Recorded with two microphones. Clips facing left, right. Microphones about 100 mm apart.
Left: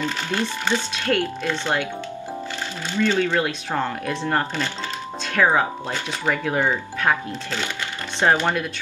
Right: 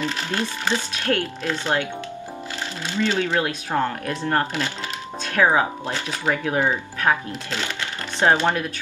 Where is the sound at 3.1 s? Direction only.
10° right (ahead or behind).